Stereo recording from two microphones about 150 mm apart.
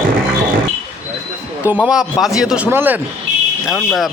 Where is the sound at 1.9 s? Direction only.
5° right (ahead or behind).